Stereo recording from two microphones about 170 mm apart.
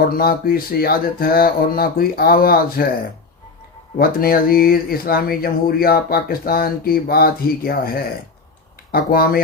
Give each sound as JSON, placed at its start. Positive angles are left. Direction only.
{"t": 0.1, "sound": "speech", "side_deg": 60}
{"t": 3.9, "sound": "speech", "side_deg": 60}